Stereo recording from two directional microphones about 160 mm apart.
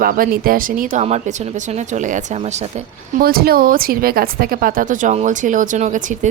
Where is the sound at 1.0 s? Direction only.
45° right (ahead or behind).